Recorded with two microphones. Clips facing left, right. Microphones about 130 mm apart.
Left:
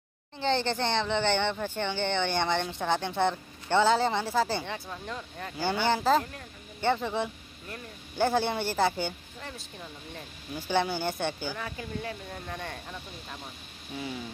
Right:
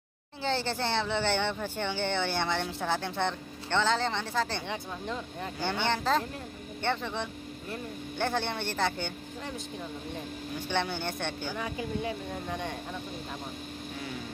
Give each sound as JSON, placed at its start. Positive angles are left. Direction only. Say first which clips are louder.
{"t": 0.4, "sound": "speech", "louder": "left 3 dB", "side_deg": -5}
{"t": 4.6, "sound": "speech", "louder": "right 2 dB", "side_deg": -15}
{"t": 5.6, "sound": "speech", "louder": "left 3 dB", "side_deg": 5}
{"t": 10.5, "sound": "speech", "louder": "left 4 dB", "side_deg": 5}
{"t": 11.5, "sound": "speech", "louder": "right 3 dB", "side_deg": -15}